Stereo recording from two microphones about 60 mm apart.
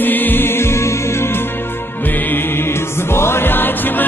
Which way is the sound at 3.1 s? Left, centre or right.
Left.